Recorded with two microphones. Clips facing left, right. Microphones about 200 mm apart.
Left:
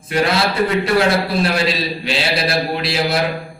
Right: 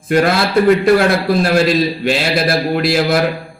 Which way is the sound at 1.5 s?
50° right (ahead or behind).